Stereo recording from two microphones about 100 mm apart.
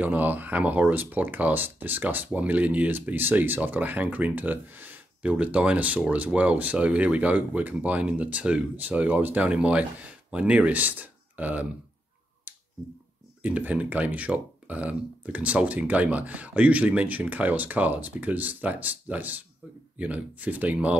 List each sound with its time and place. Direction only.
0.0 s speech: 15° right (ahead or behind)
12.5 s a sound: 15° right (ahead or behind)
13.4 s speech: 15° right (ahead or behind)